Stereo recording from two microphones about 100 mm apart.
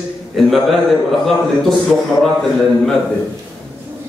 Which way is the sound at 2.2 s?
5° left (ahead or behind).